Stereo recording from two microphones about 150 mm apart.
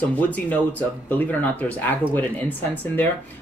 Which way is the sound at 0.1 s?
10° left (ahead or behind).